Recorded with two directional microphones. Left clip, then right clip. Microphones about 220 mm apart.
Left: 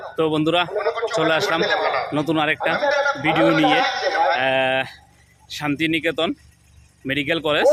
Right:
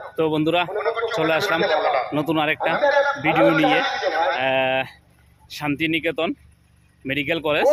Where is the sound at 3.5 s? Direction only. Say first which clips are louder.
Left 1 dB; 40° left (ahead or behind).